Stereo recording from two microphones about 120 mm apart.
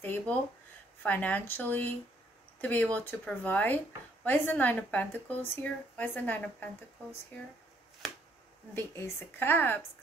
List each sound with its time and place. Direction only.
0.0 s a sound: 15° left (ahead or behind)
1.0 s speech: 15° left (ahead or behind)
8.7 s speech: 20° left (ahead or behind)